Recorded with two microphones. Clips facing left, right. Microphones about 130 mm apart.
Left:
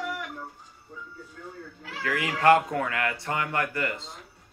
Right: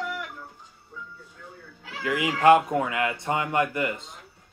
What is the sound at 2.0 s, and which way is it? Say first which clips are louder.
Speech: right 3 dB; 20° right (ahead or behind).